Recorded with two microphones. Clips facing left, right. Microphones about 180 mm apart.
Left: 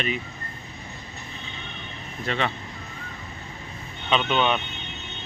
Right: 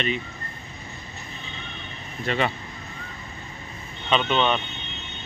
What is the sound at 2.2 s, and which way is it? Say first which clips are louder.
Speech: right 2 dB; 5° right (ahead or behind).